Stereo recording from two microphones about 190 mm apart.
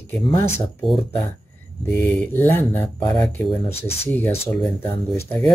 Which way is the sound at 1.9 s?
10° left (ahead or behind).